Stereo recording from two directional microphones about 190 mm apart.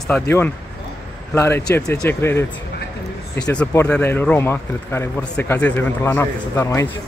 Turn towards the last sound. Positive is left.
turn(degrees=15)  # may be behind; listen again after turning